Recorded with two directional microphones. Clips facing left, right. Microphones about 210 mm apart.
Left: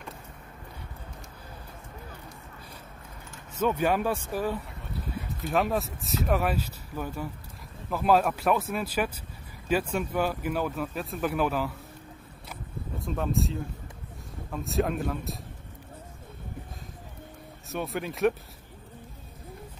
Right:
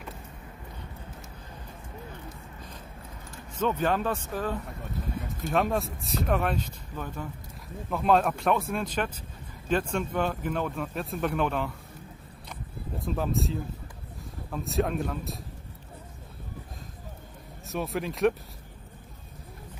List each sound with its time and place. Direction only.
3.5 s speech: 10° left (ahead or behind)
13.0 s speech: centre (ahead or behind)
17.6 s speech: centre (ahead or behind)